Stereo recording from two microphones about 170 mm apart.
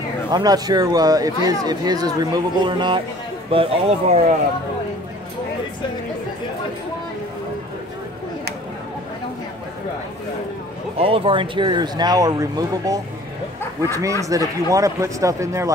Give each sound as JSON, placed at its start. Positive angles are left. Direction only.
{"t": 0.3, "sound": "speech", "side_deg": -25}
{"t": 11.0, "sound": "speech", "side_deg": -35}